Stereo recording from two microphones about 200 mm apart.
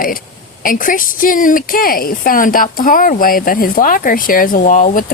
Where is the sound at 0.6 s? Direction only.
45° left (ahead or behind).